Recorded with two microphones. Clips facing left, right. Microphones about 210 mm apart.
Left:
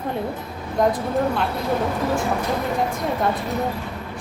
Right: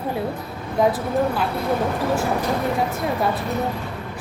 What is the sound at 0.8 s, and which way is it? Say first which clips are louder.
Speech: right 1 dB; 5° right (ahead or behind).